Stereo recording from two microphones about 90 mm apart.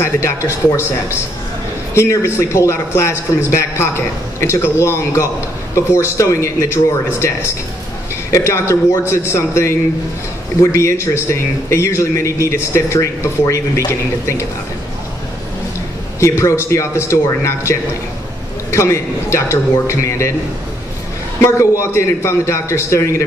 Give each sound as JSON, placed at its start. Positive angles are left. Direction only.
{"t": 0.0, "sound": "speech", "side_deg": 35}
{"t": 2.0, "sound": "speech", "side_deg": 30}
{"t": 16.2, "sound": "speech", "side_deg": 35}
{"t": 21.4, "sound": "speech", "side_deg": 30}